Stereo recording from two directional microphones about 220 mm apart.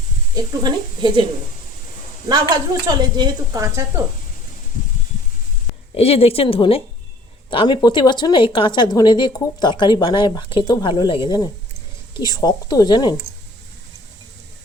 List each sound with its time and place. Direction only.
0.3 s speech: 20° right (ahead or behind)
2.3 s a woman's voice: 20° right (ahead or behind)
6.0 s a woman's voice: 25° left (ahead or behind)